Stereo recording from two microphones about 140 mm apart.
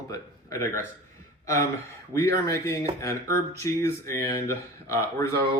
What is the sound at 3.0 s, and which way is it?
Speech, 20° left (ahead or behind).